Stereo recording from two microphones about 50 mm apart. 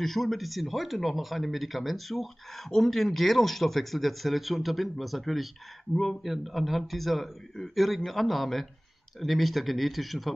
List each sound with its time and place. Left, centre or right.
0.0 s speech: centre